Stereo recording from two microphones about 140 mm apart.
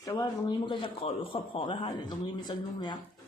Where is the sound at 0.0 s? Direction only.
25° left (ahead or behind).